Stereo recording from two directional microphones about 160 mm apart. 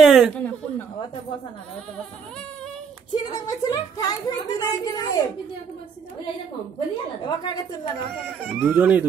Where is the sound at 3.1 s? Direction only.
25° left (ahead or behind).